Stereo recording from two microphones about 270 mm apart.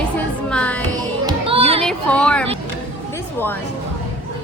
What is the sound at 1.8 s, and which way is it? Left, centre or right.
Speech, centre.